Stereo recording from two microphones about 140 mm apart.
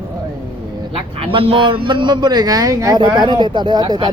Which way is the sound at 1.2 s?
40° right (ahead or behind).